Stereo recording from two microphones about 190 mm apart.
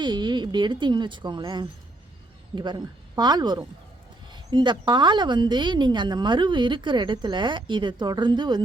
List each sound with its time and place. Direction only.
0.0 s speech: 25° right (ahead or behind)